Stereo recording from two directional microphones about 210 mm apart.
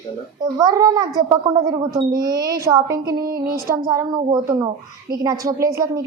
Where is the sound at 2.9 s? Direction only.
45° right (ahead or behind).